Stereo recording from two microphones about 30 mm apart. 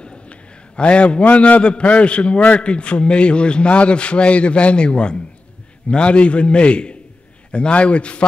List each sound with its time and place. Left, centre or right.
0.0 s a sound: left
1.2 s a man's voice: left
1.6 s a man's voice: left